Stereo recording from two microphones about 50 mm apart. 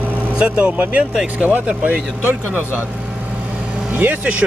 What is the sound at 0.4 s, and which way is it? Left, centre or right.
Speech, right.